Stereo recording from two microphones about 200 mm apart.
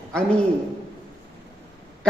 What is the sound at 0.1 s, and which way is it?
Speech, 5° left (ahead or behind).